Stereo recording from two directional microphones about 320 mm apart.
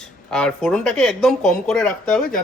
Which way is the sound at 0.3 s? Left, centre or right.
Centre.